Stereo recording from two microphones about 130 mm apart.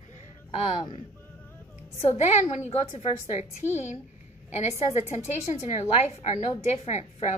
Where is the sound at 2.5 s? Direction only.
55° left (ahead or behind).